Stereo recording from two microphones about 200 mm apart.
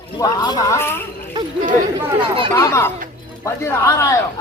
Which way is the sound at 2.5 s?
15° left (ahead or behind).